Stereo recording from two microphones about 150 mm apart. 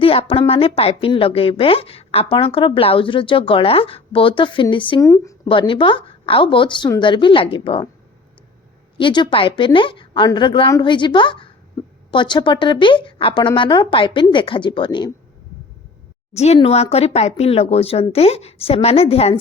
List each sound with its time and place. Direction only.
0.0 s a woman's voice: 40° left (ahead or behind)
4.9 s speech: 20° left (ahead or behind)
5.5 s a woman's voice: 35° left (ahead or behind)
9.0 s a woman's voice: 30° left (ahead or behind)
16.3 s a woman's voice: 45° left (ahead or behind)